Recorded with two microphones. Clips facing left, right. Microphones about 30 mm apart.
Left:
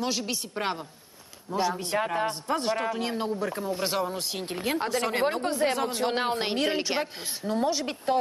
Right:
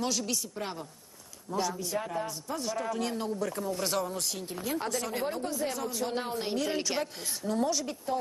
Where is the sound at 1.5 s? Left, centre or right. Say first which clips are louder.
Left 4 dB; left.